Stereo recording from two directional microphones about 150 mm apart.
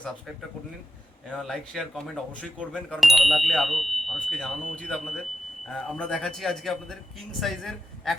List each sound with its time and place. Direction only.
1.3 s a man's voice: centre (ahead or behind)